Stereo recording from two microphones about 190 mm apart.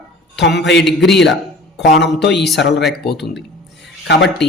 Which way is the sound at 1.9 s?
65° left (ahead or behind).